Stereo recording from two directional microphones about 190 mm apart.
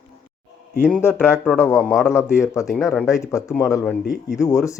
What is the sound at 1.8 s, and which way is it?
A man's voice, centre (ahead or behind).